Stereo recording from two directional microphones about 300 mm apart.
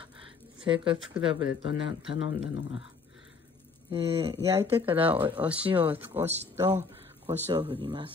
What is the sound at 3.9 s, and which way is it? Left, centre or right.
Speech, centre.